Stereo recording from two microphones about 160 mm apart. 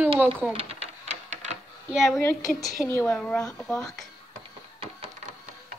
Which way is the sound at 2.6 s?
15° left (ahead or behind).